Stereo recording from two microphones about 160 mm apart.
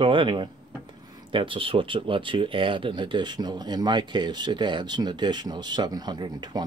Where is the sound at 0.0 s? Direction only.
30° right (ahead or behind).